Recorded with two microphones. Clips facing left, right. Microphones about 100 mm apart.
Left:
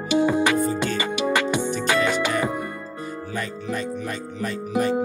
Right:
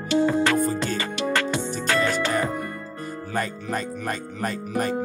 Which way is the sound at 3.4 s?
45° right (ahead or behind).